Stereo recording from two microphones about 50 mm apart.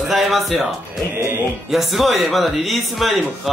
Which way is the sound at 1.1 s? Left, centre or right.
Right.